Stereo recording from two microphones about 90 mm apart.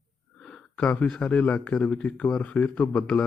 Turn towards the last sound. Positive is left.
turn(degrees=15)  # may be behind; listen again after turning